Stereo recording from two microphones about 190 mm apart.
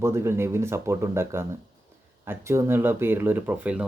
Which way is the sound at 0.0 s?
15° right (ahead or behind).